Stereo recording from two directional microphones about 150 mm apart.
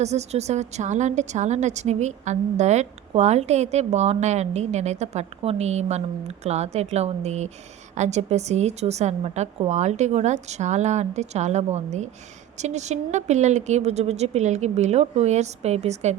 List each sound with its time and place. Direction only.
0.0 s a woman's voice: 50° right (ahead or behind)